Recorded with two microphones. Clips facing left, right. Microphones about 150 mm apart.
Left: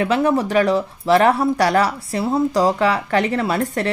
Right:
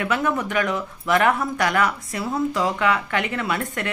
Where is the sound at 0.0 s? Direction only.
30° left (ahead or behind).